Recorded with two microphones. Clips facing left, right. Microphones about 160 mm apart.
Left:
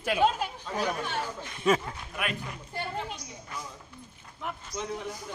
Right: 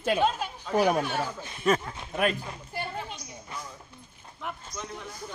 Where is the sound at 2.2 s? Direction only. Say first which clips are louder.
Right 7 dB; 35° right (ahead or behind).